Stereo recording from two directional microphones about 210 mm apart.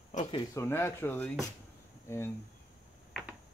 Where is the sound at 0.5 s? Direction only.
10° left (ahead or behind).